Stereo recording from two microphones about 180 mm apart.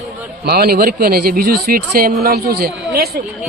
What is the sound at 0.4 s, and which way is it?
Speech, 60° right (ahead or behind).